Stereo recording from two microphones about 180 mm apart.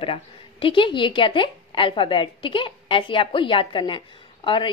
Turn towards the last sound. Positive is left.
turn(degrees=25)  # may be behind; listen again after turning